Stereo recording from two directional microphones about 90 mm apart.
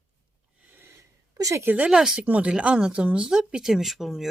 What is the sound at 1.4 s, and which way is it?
Speech, 35° right (ahead or behind).